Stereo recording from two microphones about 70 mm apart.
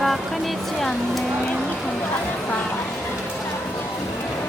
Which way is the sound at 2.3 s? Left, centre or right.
Left.